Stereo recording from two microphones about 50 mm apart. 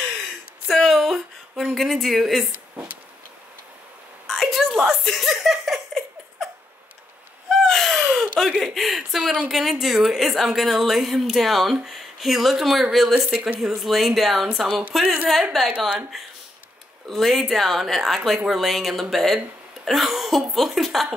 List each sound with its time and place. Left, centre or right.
0.7 s a sound: centre
1.6 s speech: centre
4.3 s a sound: centre
5.1 s laughter: centre
7.4 s a sound: centre
8.6 s a woman's voice: centre
13.1 s speech: right
13.6 s a woman's voice: centre
14.7 s speech: right
15.5 s a woman's voice: centre
17.1 s a woman's voice: centre